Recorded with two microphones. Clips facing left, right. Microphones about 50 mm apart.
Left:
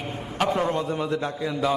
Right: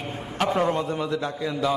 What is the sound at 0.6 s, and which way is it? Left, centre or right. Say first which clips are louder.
Speech: right 1 dB; centre.